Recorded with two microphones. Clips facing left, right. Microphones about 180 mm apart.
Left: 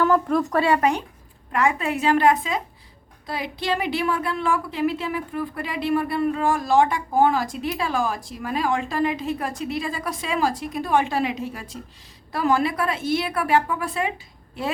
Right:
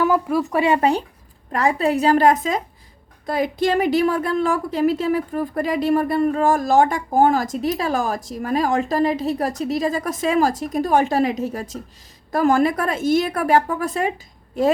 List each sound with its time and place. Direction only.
0.0 s speech: 10° right (ahead or behind)
0.6 s a woman's voice: 25° right (ahead or behind); by 14.7 s 45° right (ahead or behind)